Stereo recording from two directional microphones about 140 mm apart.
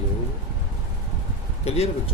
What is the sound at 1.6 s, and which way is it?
Speech, 45° left (ahead or behind).